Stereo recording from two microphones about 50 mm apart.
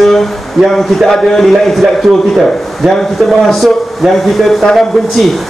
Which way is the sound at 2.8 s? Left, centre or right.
Right.